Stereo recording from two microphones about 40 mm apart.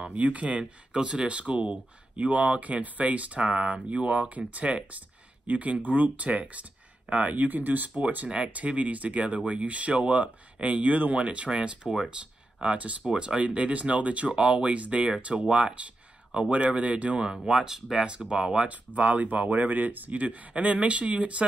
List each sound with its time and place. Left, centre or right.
0.0 s speech: right
12.6 s speech: right
13.0 s speech: centre
17.5 s speech: centre
18.3 s speech: right
18.7 s speech: right